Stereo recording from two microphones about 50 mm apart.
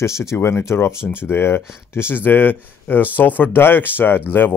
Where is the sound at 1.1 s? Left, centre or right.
Left.